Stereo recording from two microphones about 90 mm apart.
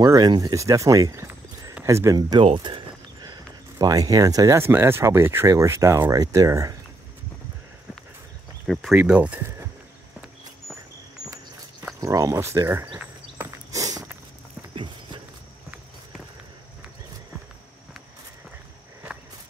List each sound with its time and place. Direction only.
0.0 s speech: 45° right (ahead or behind); by 2.1 s 30° right (ahead or behind)
2.1 s speech: 50° right (ahead or behind)
2.4 s speech: 70° right (ahead or behind)
3.2 s a sound: 50° right (ahead or behind)
4.6 s speech: 25° right (ahead or behind)
8.9 s speech: 15° right (ahead or behind)
12.0 s speech: 40° right (ahead or behind)
13.7 s walk: 40° right (ahead or behind)